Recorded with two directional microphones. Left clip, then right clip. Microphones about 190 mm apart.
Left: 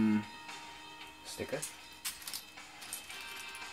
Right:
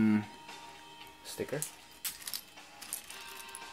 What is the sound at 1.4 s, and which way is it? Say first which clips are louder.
Speech: right 3 dB; 55° right (ahead or behind).